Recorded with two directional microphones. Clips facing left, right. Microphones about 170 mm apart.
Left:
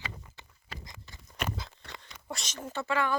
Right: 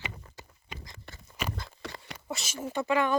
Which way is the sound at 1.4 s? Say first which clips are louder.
Even; centre (ahead or behind).